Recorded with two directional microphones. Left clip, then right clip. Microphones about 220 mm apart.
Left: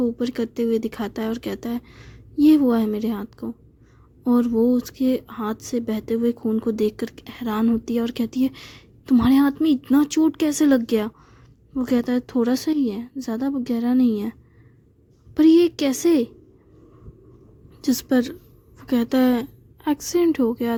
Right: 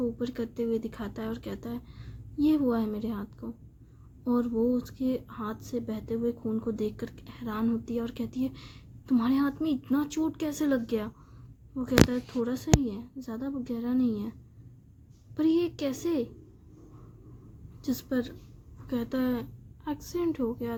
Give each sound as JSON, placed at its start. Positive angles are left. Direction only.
{"t": 0.0, "sound": "speech", "side_deg": 40}
{"t": 15.4, "sound": "speech", "side_deg": 40}
{"t": 17.8, "sound": "a woman's voice", "side_deg": 40}